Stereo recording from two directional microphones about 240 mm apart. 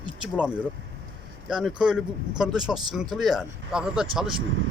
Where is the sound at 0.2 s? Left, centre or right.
Centre.